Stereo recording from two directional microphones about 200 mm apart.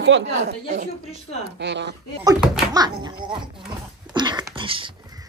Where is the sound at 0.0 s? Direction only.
65° right (ahead or behind).